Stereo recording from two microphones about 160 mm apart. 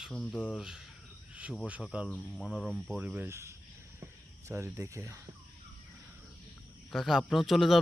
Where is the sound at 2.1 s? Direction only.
5° left (ahead or behind).